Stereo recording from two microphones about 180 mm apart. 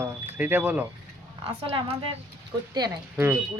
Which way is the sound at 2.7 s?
20° right (ahead or behind).